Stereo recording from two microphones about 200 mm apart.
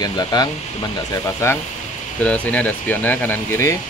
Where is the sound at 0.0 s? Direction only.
20° left (ahead or behind).